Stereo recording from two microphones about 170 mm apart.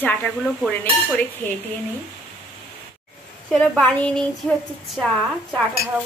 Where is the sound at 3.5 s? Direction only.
5° left (ahead or behind).